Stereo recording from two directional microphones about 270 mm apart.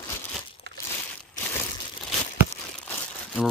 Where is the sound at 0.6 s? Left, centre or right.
Right.